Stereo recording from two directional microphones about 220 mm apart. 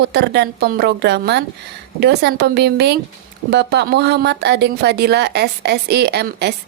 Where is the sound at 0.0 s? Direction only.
50° right (ahead or behind).